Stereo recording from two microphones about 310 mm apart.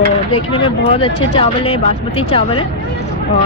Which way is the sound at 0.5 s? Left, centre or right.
Centre.